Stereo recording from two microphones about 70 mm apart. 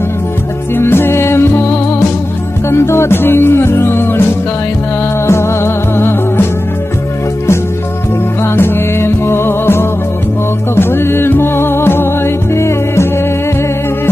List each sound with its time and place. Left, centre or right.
0.7 s music: left
5.2 s music: left
8.5 s music: left